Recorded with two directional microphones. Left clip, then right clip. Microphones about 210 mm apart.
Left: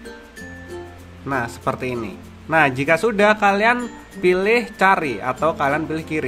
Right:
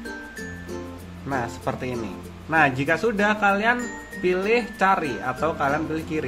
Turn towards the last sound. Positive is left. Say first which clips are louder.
# left 3 dB
turn(degrees=20)  # may be behind; listen again after turning